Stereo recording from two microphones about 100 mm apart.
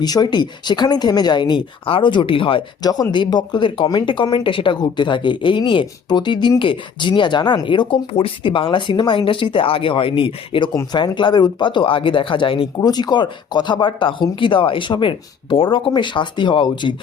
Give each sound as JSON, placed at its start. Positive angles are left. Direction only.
{"t": 0.0, "sound": "speech", "side_deg": 40}
{"t": 2.8, "sound": "speech", "side_deg": 40}
{"t": 12.8, "sound": "speech", "side_deg": 45}